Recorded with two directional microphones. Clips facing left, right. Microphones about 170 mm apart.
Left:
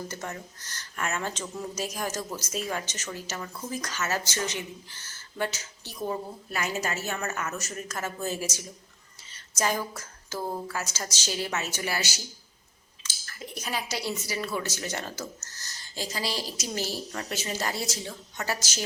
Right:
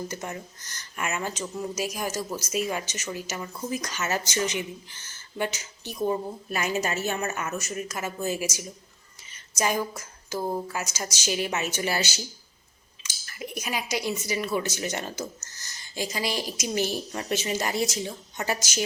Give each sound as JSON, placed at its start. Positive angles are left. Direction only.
{"t": 0.1, "sound": "speech", "side_deg": -15}
{"t": 13.0, "sound": "speech", "side_deg": -15}